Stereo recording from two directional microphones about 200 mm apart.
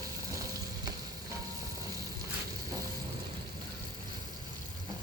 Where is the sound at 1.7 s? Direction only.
15° right (ahead or behind).